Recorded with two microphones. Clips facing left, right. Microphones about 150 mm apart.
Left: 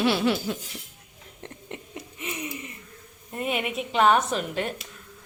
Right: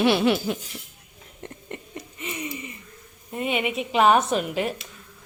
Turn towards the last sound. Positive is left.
turn(degrees=-10)  # may be behind; listen again after turning